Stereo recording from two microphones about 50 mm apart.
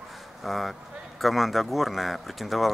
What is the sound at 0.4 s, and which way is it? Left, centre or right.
Speech, centre.